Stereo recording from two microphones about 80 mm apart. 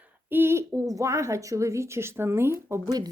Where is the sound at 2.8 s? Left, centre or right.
Right.